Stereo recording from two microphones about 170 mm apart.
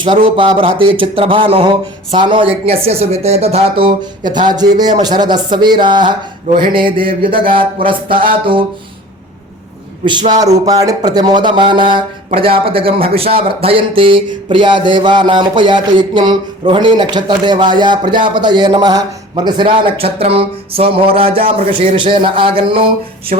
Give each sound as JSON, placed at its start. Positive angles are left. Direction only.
{"t": 0.0, "sound": "speech", "side_deg": -30}
{"t": 6.9, "sound": "a sound", "side_deg": -55}
{"t": 7.2, "sound": "speech", "side_deg": -30}
{"t": 10.7, "sound": "speech", "side_deg": -20}